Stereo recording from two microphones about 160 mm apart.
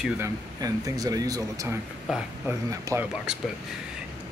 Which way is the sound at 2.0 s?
5° right (ahead or behind).